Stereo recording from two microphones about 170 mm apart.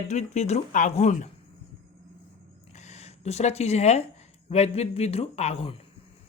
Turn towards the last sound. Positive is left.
turn(degrees=35)  # may be behind; listen again after turning